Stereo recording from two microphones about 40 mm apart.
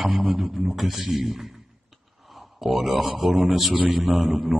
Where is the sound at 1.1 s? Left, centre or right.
Centre.